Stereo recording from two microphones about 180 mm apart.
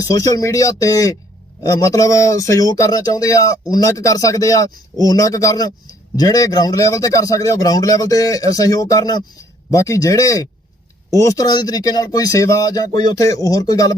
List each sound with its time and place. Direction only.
0.0 s speech: 20° left (ahead or behind)